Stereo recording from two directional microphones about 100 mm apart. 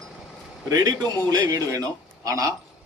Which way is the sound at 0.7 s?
35° right (ahead or behind).